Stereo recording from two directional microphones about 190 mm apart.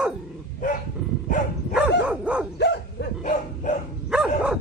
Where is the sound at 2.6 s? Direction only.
60° left (ahead or behind).